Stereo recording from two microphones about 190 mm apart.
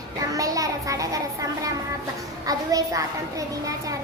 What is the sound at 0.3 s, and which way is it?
A child's voice, 20° right (ahead or behind).